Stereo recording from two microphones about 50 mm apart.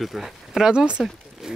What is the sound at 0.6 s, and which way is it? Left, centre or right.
Speech, centre.